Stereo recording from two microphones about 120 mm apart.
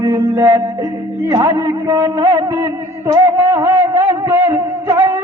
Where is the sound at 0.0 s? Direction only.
35° right (ahead or behind).